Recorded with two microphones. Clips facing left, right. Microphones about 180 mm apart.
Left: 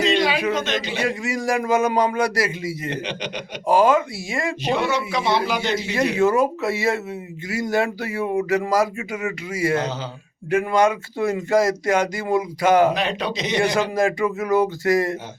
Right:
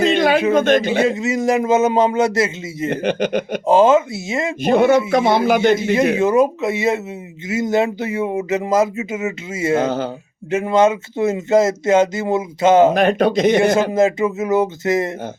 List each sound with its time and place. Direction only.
0.0 s a sound: 50° right (ahead or behind)
0.5 s speech: 50° right (ahead or behind)
1.0 s speech: 20° right (ahead or behind)
2.9 s speech: 50° right (ahead or behind)
3.7 s speech: 25° right (ahead or behind)
4.6 s speech: 50° right (ahead or behind)
6.1 s speech: 20° right (ahead or behind)
9.8 s speech: 50° right (ahead or behind)
10.5 s speech: 25° right (ahead or behind)
12.9 s speech: 50° right (ahead or behind)
13.9 s speech: 20° right (ahead or behind)